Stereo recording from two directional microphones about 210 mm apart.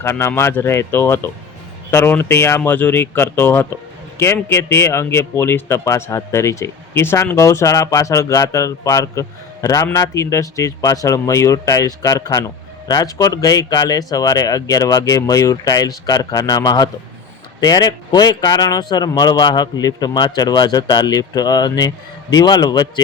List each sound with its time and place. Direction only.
0.0 s speech: 10° left (ahead or behind)